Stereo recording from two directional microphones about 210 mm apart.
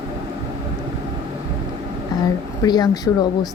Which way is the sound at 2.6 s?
20° left (ahead or behind).